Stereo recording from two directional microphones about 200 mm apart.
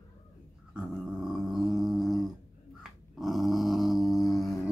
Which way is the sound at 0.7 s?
5° right (ahead or behind).